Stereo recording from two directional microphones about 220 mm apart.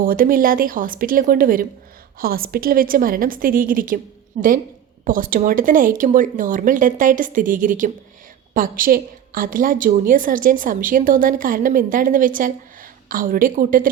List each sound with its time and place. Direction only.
0.0 s a woman's voice: 40° right (ahead or behind)